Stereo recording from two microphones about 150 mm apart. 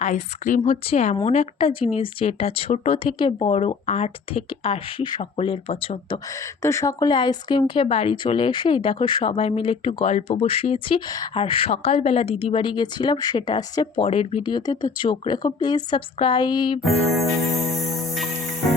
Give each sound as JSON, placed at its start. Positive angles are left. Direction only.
{"t": 0.0, "sound": "a woman's voice", "side_deg": 55}
{"t": 6.6, "sound": "speech", "side_deg": 20}
{"t": 10.1, "sound": "speech", "side_deg": 45}
{"t": 17.9, "sound": "music", "side_deg": 0}